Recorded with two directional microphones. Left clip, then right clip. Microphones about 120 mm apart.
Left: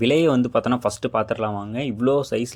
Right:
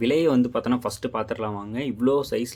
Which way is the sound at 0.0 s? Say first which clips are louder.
Left 3 dB; 40° left (ahead or behind).